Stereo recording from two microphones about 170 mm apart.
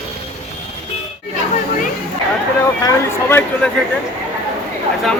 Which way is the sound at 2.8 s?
15° left (ahead or behind).